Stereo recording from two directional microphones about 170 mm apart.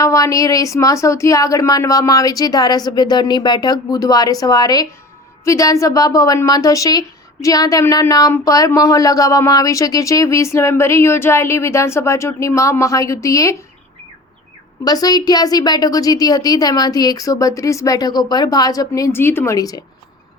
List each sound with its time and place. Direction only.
0.0 s speech: 20° left (ahead or behind)
14.8 s speech: 20° left (ahead or behind)